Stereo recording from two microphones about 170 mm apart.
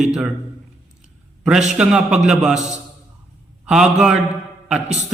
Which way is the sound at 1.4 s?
5° right (ahead or behind).